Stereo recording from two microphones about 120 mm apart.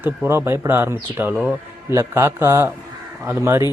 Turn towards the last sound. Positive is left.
turn(degrees=-20)  # may be behind; listen again after turning